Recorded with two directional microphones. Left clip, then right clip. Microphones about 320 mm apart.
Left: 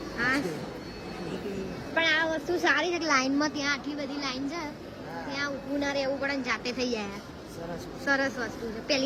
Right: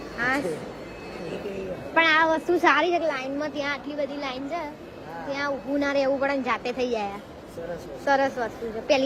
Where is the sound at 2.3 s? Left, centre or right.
Right.